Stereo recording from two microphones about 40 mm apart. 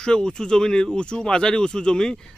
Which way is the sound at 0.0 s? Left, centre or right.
Centre.